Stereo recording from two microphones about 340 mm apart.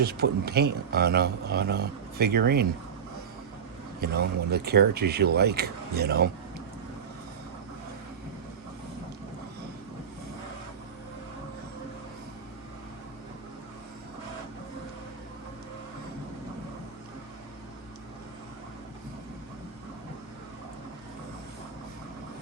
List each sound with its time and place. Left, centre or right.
0.0 s a man's voice: right
4.0 s a man's voice: right